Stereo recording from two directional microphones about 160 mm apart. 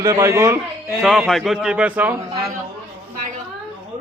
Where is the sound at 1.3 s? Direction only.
Centre (ahead or behind).